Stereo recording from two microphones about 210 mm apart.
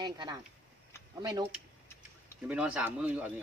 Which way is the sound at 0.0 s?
20° right (ahead or behind).